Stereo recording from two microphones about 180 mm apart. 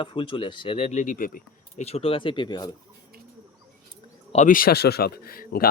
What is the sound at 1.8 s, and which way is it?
Speech, 35° left (ahead or behind).